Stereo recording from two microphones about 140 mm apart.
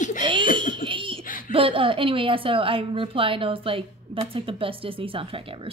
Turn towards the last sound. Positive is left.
turn(degrees=-40)  # may be behind; listen again after turning